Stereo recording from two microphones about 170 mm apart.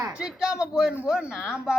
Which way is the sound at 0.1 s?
5° right (ahead or behind).